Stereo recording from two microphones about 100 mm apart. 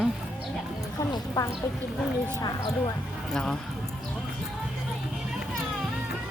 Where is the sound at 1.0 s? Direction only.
35° left (ahead or behind).